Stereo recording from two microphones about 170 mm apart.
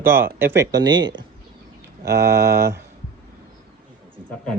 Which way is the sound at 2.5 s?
70° right (ahead or behind).